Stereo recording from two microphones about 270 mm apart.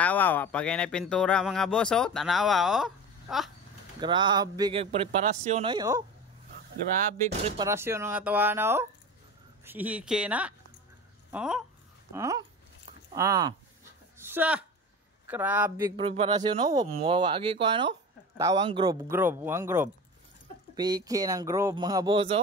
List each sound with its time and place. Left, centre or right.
0.0 s speech: centre
4.0 s speech: centre
7.2 s speech: right
7.6 s speech: centre
12.1 s a sound: centre
13.1 s speech: centre
14.1 s a sound: centre
15.2 s speech: centre
16.0 s speech: right